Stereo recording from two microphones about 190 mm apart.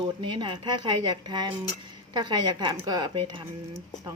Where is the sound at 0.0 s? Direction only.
25° right (ahead or behind).